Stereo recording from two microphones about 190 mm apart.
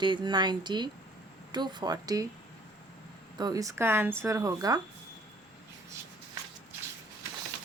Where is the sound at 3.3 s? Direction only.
20° right (ahead or behind).